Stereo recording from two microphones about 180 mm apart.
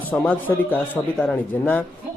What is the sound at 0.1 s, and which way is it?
A man's voice, 10° left (ahead or behind).